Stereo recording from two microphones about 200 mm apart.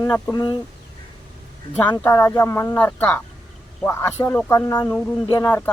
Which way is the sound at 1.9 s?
10° left (ahead or behind).